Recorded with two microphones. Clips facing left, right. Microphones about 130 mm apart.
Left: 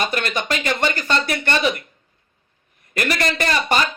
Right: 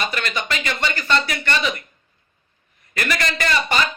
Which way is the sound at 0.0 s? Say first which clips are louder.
Left 3 dB; 45° left (ahead or behind).